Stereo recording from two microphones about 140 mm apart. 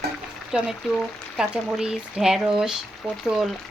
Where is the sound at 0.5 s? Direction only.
5° right (ahead or behind).